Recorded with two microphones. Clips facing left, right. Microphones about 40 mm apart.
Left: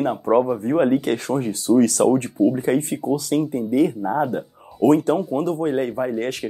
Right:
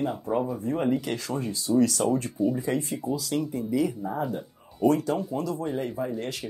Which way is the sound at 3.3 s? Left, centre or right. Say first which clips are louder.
Left 7 dB; left.